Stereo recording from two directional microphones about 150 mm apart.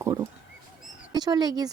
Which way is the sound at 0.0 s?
20° right (ahead or behind).